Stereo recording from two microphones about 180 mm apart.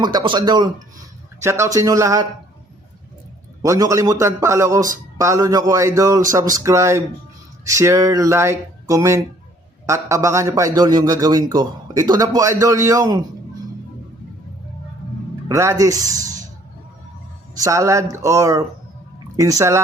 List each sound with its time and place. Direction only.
0.0 s a man's voice: 25° right (ahead or behind)
3.6 s a man's voice: 20° right (ahead or behind)
15.4 s speech: 15° right (ahead or behind)
17.5 s a man's voice: 15° right (ahead or behind)